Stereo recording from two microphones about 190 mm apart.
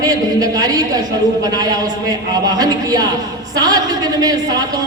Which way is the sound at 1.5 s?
20° right (ahead or behind).